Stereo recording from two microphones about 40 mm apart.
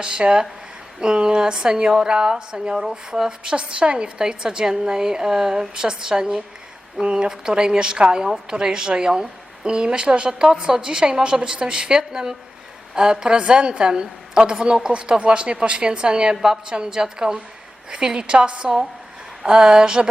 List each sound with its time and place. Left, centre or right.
0.0 s a woman's voice: right